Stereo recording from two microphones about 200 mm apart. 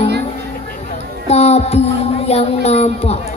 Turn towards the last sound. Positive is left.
turn(degrees=30)  # may be behind; listen again after turning